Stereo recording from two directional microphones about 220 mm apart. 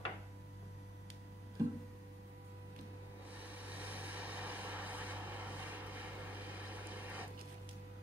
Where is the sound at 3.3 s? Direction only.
5° right (ahead or behind).